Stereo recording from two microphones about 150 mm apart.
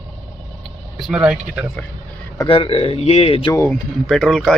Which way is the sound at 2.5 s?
40° left (ahead or behind).